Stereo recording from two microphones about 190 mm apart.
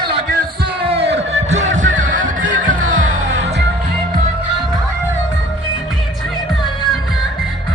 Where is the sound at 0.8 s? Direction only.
30° right (ahead or behind).